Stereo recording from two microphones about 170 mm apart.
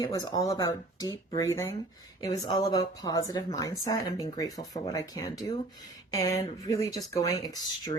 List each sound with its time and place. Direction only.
0.0 s a woman's voice: 20° left (ahead or behind)